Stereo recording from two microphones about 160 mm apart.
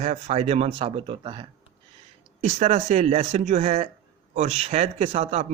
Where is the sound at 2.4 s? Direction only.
45° right (ahead or behind).